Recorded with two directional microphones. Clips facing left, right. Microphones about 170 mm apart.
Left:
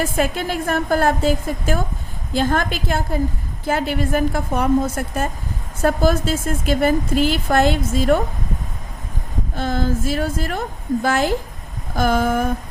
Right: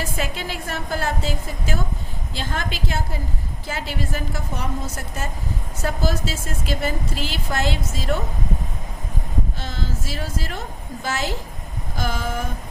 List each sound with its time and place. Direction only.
0.0 s a woman's voice: 50° left (ahead or behind)
9.6 s a woman's voice: 55° left (ahead or behind)